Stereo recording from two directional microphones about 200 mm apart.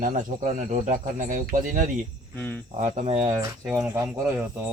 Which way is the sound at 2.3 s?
10° left (ahead or behind).